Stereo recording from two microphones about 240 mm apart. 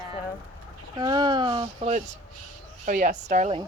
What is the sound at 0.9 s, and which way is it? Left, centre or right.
Speech, centre.